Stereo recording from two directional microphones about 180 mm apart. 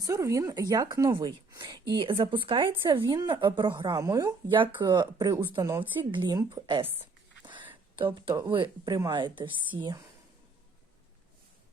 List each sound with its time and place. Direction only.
0.0 s a woman's voice: 20° right (ahead or behind)
7.4 s a sound: 25° right (ahead or behind)
7.9 s a woman's voice: 25° right (ahead or behind)